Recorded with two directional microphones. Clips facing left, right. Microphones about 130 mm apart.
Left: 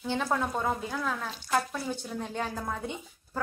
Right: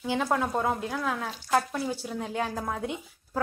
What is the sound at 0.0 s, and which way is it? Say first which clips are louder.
A woman's voice: right 2 dB; 5° right (ahead or behind).